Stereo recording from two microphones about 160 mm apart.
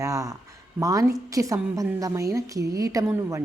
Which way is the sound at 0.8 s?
20° right (ahead or behind).